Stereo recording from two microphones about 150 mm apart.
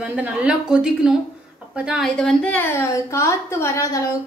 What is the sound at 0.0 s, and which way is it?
A woman's voice, 10° right (ahead or behind).